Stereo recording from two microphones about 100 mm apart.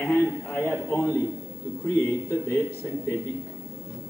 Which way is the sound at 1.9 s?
30° left (ahead or behind).